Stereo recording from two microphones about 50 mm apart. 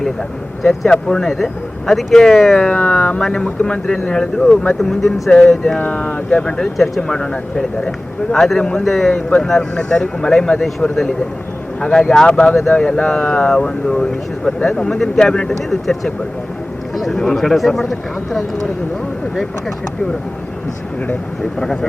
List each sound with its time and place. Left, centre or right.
0.6 s speech: centre
2.6 s speech: left
5.9 s speech: left
6.6 s speech: centre
7.1 s speech: centre
8.8 s speech: centre
11.8 s speech: centre
14.9 s speech: centre
16.9 s speech: centre